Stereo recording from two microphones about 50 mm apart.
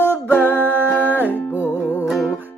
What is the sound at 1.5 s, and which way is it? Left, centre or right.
Music, left.